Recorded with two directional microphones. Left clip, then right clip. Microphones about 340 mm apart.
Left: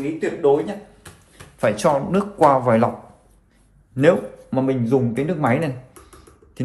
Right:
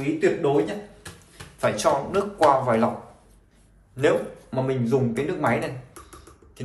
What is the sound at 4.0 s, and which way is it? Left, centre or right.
A man's voice, centre.